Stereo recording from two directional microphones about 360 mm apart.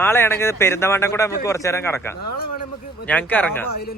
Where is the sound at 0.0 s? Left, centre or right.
Centre.